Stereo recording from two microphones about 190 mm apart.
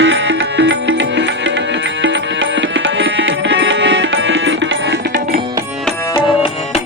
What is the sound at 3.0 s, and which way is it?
Tabla, 70° right (ahead or behind).